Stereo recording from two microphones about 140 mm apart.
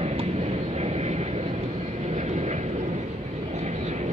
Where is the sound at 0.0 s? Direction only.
50° right (ahead or behind).